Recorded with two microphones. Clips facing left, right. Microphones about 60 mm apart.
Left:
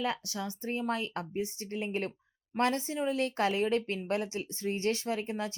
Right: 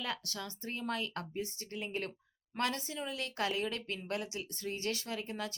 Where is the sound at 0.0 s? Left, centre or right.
Left.